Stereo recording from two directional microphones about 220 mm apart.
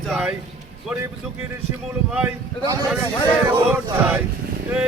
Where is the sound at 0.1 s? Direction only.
5° right (ahead or behind).